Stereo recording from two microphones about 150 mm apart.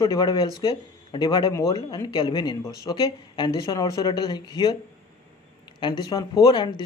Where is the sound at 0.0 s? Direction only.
25° left (ahead or behind).